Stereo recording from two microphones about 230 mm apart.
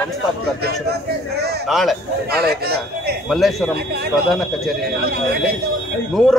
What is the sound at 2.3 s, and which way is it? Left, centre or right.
Speech, right.